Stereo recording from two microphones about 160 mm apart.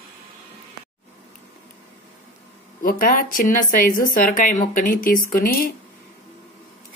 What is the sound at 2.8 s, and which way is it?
Speech, 60° left (ahead or behind).